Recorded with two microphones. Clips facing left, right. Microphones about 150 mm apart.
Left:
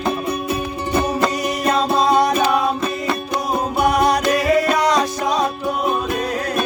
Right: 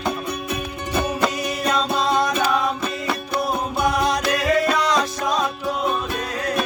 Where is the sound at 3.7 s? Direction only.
65° left (ahead or behind).